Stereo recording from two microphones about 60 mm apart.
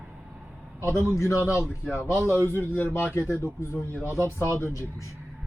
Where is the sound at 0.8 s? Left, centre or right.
Left.